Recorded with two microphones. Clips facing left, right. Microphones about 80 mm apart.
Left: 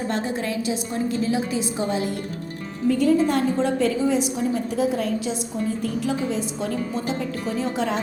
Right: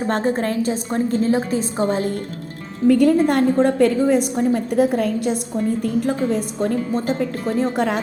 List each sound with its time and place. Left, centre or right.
0.1 s a woman's voice: right
2.8 s a woman's voice: right